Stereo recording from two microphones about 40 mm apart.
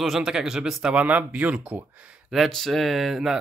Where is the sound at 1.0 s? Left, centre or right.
Right.